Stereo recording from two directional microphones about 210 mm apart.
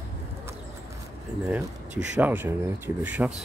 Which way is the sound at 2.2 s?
10° right (ahead or behind).